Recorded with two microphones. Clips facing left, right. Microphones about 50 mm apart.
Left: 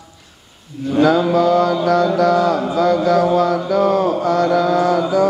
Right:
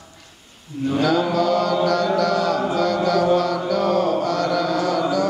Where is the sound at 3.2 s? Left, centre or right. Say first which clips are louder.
Left 3 dB; centre.